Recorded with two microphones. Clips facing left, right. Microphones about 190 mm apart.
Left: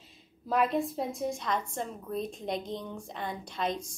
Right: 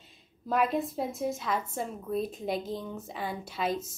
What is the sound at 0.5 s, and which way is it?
A woman's voice, centre (ahead or behind).